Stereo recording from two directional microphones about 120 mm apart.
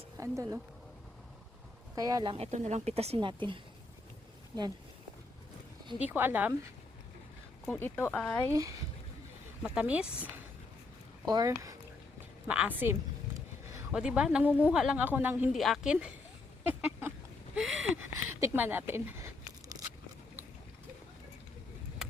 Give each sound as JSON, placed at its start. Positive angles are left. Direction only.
{"t": 0.2, "sound": "speech", "side_deg": -25}
{"t": 2.0, "sound": "speech", "side_deg": -30}
{"t": 2.3, "sound": "speech", "side_deg": -65}
{"t": 3.2, "sound": "a woman's voice", "side_deg": -45}
{"t": 6.0, "sound": "a woman's voice", "side_deg": -15}
{"t": 7.7, "sound": "speech", "side_deg": 15}
{"t": 8.4, "sound": "speech", "side_deg": -30}
{"t": 9.6, "sound": "a woman's voice", "side_deg": -10}
{"t": 11.3, "sound": "speech", "side_deg": -30}
{"t": 12.5, "sound": "a woman's voice", "side_deg": -10}
{"t": 15.5, "sound": "a woman's voice", "side_deg": 0}
{"t": 16.6, "sound": "a sound", "side_deg": -15}
{"t": 17.5, "sound": "a sound", "side_deg": 0}
{"t": 17.9, "sound": "a sound", "side_deg": -20}